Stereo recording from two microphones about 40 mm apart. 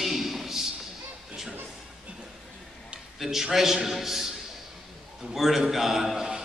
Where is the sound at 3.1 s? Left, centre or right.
Centre.